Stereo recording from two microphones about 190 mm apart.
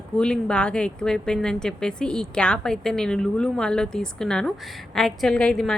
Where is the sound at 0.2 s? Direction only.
5° left (ahead or behind).